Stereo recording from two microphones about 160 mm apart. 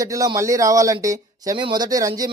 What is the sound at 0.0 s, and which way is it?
Speech, 20° right (ahead or behind).